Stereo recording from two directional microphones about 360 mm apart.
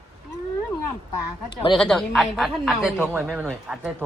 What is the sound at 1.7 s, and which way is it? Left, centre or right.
Speech, centre.